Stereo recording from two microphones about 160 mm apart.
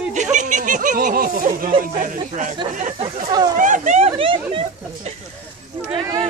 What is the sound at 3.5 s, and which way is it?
Speech, 55° right (ahead or behind).